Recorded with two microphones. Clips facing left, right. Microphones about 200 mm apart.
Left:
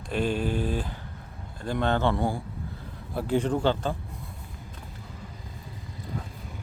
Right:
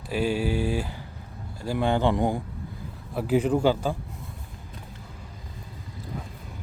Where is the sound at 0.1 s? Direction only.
10° right (ahead or behind).